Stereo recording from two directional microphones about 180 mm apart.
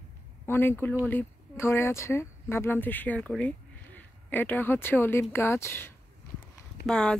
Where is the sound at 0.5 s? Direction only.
10° left (ahead or behind).